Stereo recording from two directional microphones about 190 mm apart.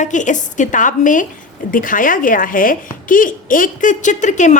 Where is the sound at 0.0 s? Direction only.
40° left (ahead or behind).